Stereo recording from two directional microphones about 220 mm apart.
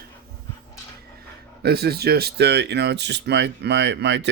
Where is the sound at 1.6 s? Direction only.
45° right (ahead or behind).